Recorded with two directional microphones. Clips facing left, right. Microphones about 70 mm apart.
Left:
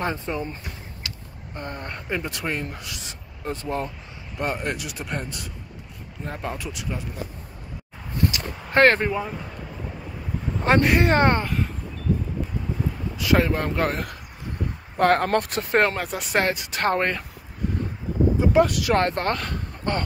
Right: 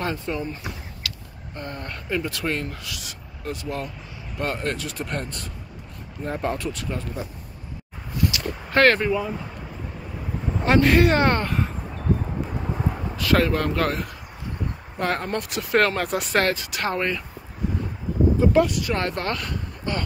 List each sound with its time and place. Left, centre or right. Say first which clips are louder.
0.0 s speech: even; left
8.3 s a sound: right 2 dB; left
10.6 s speech: right 2 dB; left
11.4 s speech: right 1 dB; centre
13.2 s speech: even; centre
15.0 s speech: left 6 dB; left
16.0 s speech: right 4 dB; centre
16.3 s speech: even; centre
16.7 s speech: left 2 dB; left
18.7 s speech: left 3 dB; left
18.9 s speech: left 4 dB; left